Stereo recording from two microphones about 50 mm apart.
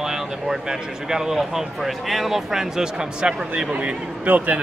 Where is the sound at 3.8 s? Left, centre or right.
Right.